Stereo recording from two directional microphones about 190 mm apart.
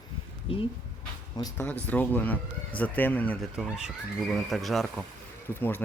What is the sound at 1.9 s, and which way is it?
Speech, 10° left (ahead or behind).